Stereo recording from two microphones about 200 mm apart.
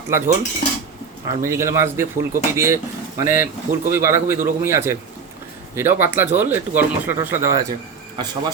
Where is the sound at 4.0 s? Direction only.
15° right (ahead or behind).